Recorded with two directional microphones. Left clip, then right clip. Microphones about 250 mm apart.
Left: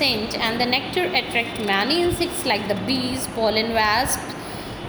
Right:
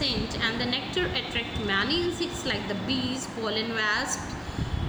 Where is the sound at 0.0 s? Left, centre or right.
Centre.